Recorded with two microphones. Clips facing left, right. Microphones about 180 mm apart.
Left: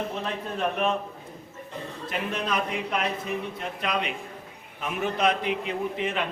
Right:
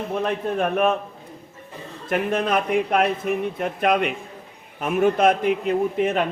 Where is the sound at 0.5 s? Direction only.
50° right (ahead or behind).